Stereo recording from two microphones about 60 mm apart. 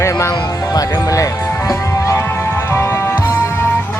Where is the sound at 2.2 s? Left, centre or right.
Left.